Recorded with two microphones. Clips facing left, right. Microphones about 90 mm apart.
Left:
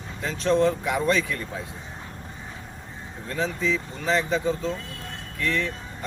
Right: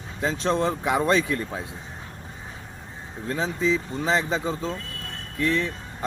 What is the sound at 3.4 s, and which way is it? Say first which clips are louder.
A man's voice: right 2 dB; 20° right (ahead or behind).